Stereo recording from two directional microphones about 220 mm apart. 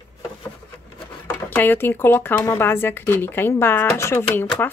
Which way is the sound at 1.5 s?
10° left (ahead or behind).